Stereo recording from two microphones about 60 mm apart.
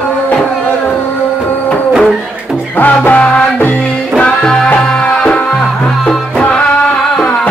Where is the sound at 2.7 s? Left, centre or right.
Left.